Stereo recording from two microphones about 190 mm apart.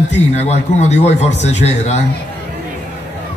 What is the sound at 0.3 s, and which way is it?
A man's voice, 35° left (ahead or behind).